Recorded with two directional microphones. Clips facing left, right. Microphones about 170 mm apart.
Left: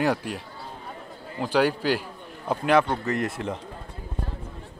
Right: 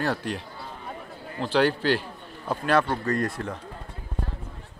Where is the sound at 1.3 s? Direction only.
15° left (ahead or behind).